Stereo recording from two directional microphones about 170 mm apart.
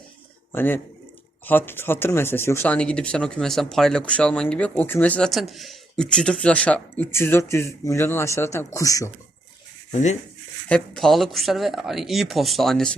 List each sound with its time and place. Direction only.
0.5 s speech: 10° left (ahead or behind)
9.9 s speech: 45° left (ahead or behind)
10.7 s speech: 5° left (ahead or behind)